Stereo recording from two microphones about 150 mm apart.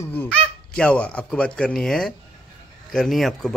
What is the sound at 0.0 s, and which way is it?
Speech, 15° left (ahead or behind).